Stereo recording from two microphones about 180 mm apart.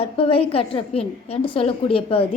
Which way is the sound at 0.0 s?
30° left (ahead or behind).